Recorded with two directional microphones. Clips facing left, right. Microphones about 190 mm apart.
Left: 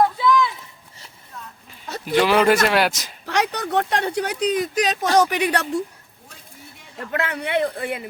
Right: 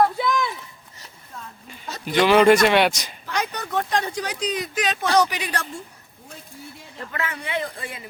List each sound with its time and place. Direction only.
0.2 s a sound: 50° right (ahead or behind)
1.6 s speech: centre (ahead or behind)
3.2 s speech: 70° left (ahead or behind)
7.1 s speech: 65° left (ahead or behind)